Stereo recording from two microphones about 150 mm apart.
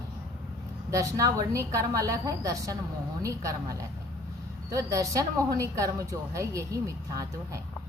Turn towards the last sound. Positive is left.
turn(degrees=-20)  # may be behind; listen again after turning